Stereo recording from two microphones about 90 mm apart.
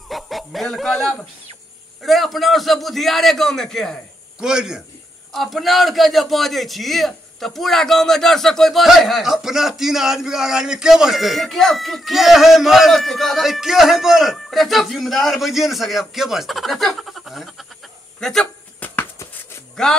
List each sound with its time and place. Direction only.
0.1 s a man's voice: centre (ahead or behind)
4.4 s a man's voice: 5° right (ahead or behind)
18.8 s a sound: 20° left (ahead or behind)
19.8 s a man's voice: 5° left (ahead or behind)